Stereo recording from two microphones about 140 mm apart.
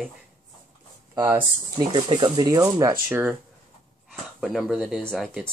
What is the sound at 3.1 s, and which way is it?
Speech, 15° right (ahead or behind).